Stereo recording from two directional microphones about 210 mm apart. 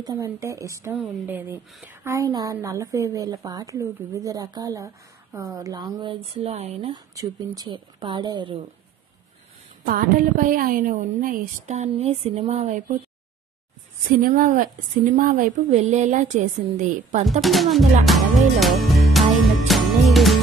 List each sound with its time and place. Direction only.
0.0 s a woman's voice: 15° right (ahead or behind); by 7.0 s 30° right (ahead or behind)
7.2 s a woman's voice: 15° right (ahead or behind)
9.8 s speech: 40° right (ahead or behind)
14.2 s speech: 40° right (ahead or behind)
17.4 s speech: centre (ahead or behind)
18.0 s music: centre (ahead or behind)